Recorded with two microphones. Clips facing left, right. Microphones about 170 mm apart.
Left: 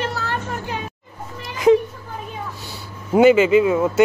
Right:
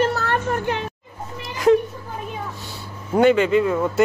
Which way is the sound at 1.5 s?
Centre (ahead or behind).